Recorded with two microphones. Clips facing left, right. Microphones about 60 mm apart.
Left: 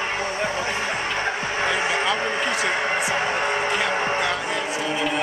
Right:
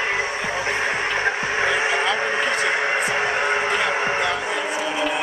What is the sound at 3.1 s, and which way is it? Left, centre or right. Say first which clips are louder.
Music: right 2 dB; centre.